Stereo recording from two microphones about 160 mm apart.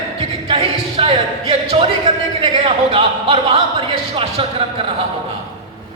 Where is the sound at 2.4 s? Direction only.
35° right (ahead or behind).